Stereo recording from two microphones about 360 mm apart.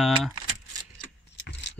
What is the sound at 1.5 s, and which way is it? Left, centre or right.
Keys jangling, left.